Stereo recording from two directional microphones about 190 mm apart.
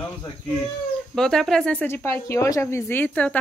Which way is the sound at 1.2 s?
5° left (ahead or behind).